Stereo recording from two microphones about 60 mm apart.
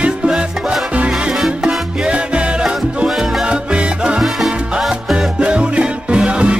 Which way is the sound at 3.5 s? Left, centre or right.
Centre.